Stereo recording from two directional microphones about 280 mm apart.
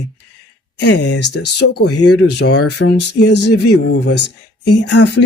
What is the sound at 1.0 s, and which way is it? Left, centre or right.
Speech, left.